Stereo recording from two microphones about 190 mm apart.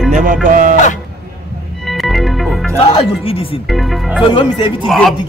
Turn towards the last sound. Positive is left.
turn(degrees=0)  # may be behind; listen again after turning